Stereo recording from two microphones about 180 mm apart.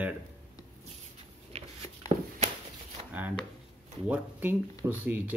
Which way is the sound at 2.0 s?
20° left (ahead or behind).